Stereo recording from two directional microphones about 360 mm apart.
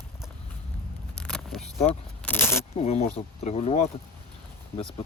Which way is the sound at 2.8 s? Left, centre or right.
Centre.